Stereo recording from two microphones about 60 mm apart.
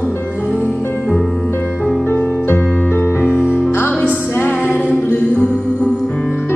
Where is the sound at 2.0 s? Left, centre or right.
Left.